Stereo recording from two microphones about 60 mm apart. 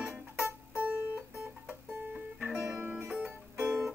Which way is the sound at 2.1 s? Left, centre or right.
Right.